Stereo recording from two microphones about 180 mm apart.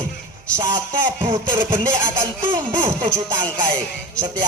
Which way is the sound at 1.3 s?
25° right (ahead or behind).